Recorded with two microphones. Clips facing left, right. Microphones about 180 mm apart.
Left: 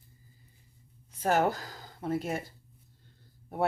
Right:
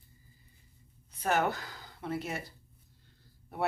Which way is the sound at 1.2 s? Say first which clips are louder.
Left 3 dB; 40° left (ahead or behind).